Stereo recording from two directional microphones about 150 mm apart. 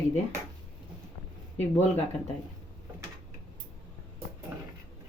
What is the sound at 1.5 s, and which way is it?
Speech, 45° left (ahead or behind).